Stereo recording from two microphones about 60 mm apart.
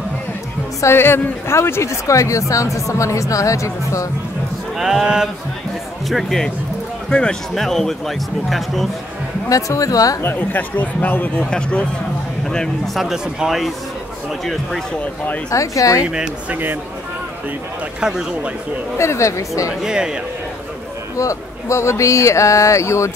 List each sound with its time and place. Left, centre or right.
0.9 s speech: left
4.7 s speech: centre
6.0 s speech: centre
9.5 s speech: left
10.2 s speech: left; by 12.9 s centre
12.9 s speech: centre
15.5 s speech: left
16.4 s speech: right
18.0 s speech: centre
18.9 s speech: left
19.7 s speech: centre
21.2 s speech: left